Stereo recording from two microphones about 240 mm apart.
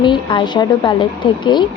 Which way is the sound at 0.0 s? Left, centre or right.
Centre.